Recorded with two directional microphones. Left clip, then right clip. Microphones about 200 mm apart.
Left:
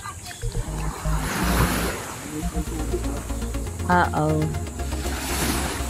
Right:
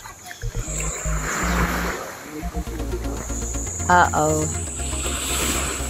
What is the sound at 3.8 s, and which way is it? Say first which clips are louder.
Cricket: right 4 dB; centre (ahead or behind).